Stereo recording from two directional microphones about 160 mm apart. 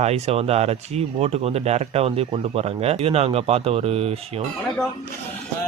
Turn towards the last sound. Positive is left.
turn(degrees=-40)  # may be behind; listen again after turning